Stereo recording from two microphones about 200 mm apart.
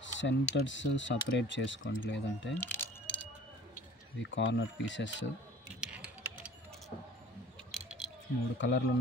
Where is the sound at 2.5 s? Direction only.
10° left (ahead or behind).